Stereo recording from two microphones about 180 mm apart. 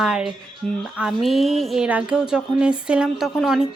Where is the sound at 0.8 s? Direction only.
5° right (ahead or behind).